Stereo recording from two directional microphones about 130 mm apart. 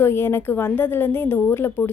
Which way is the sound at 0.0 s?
20° left (ahead or behind).